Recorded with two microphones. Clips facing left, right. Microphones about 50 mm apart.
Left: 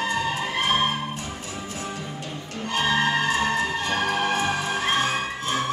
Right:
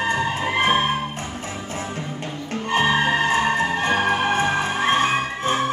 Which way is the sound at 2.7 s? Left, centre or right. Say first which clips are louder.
Right 3 dB; right.